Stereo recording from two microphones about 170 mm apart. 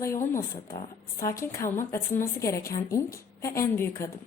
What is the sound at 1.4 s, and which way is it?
A woman's voice, 15° left (ahead or behind).